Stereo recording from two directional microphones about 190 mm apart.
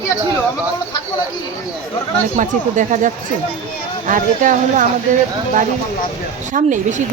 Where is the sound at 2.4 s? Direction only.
40° right (ahead or behind).